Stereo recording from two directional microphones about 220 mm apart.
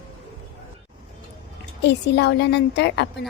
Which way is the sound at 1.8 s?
50° left (ahead or behind).